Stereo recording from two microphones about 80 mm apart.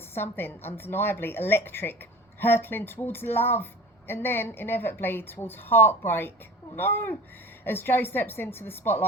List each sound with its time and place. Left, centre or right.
0.1 s speech: left